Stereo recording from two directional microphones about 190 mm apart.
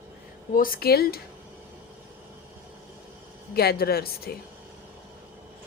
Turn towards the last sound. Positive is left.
turn(degrees=55)  # may be behind; listen again after turning